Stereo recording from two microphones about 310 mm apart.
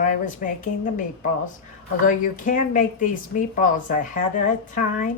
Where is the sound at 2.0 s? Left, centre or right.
Left.